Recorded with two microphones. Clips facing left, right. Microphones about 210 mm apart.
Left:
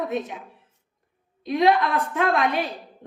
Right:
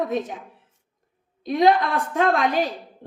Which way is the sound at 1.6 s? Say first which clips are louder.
Right 1 dB; 35° right (ahead or behind).